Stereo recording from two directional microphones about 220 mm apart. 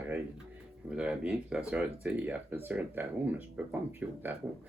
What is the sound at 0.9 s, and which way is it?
Speech, 5° right (ahead or behind).